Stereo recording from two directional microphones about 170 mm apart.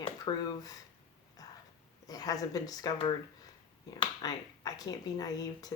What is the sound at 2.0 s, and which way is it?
Speech, 20° left (ahead or behind).